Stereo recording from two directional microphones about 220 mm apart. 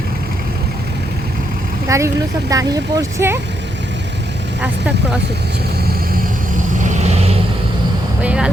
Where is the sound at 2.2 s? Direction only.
50° right (ahead or behind).